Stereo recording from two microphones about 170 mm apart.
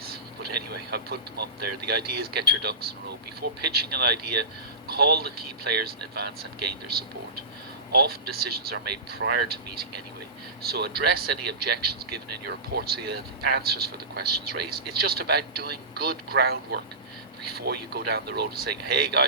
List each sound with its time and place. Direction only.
0.7 s speech: 70° right (ahead or behind)